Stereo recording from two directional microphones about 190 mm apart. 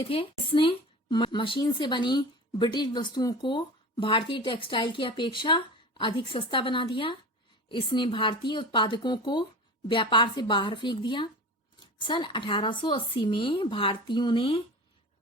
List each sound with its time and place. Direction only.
0.0 s speech: 30° left (ahead or behind)